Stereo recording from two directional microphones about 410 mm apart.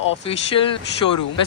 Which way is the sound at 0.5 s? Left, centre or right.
Left.